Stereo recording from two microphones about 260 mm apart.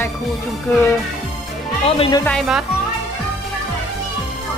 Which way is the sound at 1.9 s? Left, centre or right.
Centre.